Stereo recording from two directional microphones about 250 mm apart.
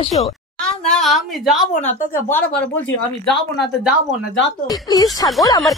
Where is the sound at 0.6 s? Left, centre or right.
Centre.